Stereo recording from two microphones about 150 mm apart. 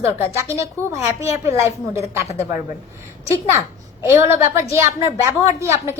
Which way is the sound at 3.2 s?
20° right (ahead or behind).